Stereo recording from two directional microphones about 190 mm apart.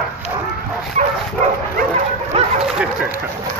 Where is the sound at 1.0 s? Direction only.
40° right (ahead or behind).